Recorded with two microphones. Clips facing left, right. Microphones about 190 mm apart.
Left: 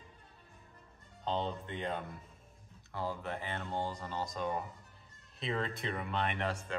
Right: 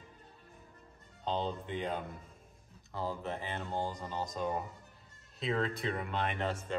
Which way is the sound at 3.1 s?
Centre (ahead or behind).